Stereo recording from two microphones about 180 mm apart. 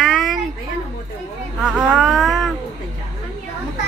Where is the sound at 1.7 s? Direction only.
Centre (ahead or behind).